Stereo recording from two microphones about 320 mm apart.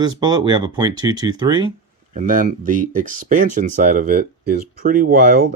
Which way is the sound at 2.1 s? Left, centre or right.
Right.